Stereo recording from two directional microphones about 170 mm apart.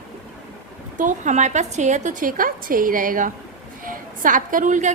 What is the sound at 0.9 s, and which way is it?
A woman's voice, 45° right (ahead or behind).